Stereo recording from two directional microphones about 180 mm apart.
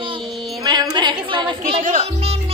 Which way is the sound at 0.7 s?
25° right (ahead or behind).